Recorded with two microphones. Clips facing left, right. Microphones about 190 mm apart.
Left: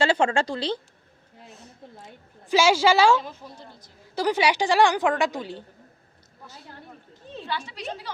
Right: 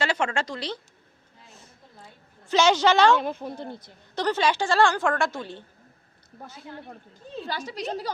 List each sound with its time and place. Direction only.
0.0 s speech: 30° left (ahead or behind)
2.5 s a woman's voice: 5° left (ahead or behind)
3.2 s speech: 60° right (ahead or behind)
4.1 s a woman's voice: 10° left (ahead or behind)
7.4 s a woman's voice: 40° right (ahead or behind)